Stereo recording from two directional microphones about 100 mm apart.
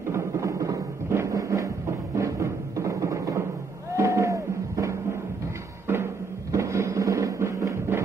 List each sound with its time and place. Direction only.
0.1 s music: 30° right (ahead or behind)
6.5 s music: 30° right (ahead or behind)